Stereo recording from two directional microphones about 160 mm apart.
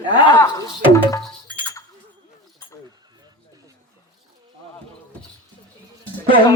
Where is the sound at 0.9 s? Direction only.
20° left (ahead or behind).